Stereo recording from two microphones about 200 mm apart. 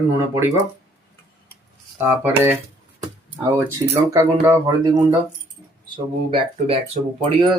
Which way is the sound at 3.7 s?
15° right (ahead or behind).